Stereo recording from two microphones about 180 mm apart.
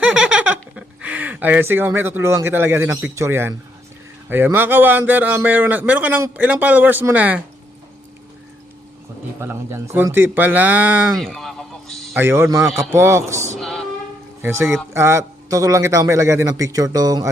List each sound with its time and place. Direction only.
0.0 s a sound: 5° right (ahead or behind)
4.3 s a man's voice: 10° right (ahead or behind)
9.4 s a man's voice: 15° right (ahead or behind)
11.1 s a sound: centre (ahead or behind)
12.1 s a man's voice: 15° right (ahead or behind)
13.6 s female singing: centre (ahead or behind)
14.4 s a man's voice: 15° right (ahead or behind)